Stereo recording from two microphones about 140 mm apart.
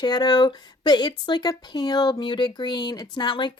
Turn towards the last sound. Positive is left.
turn(degrees=35)  # may be behind; listen again after turning